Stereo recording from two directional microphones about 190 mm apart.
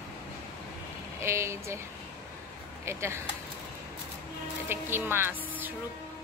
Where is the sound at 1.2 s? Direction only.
15° right (ahead or behind).